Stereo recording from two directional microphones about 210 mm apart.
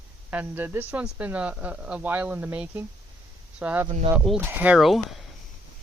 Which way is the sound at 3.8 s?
25° right (ahead or behind).